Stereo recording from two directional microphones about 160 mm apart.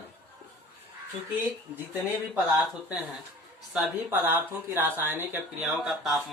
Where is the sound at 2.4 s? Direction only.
5° right (ahead or behind).